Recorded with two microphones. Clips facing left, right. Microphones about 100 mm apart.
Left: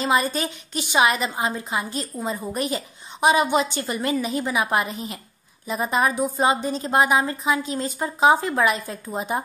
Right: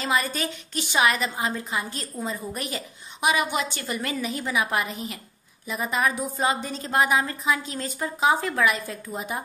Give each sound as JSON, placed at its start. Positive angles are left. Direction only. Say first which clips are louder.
{"t": 0.0, "sound": "a woman's voice", "louder": "left 4 dB", "side_deg": 25}